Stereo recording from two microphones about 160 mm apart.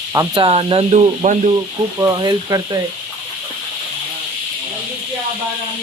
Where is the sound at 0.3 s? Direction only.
30° right (ahead or behind).